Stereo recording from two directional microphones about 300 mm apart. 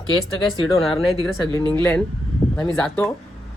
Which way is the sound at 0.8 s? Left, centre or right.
Centre.